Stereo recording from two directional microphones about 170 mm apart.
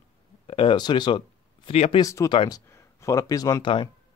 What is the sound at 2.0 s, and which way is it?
Speech, 20° left (ahead or behind).